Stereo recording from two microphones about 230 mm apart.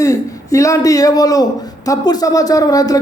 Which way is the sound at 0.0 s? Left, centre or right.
Centre.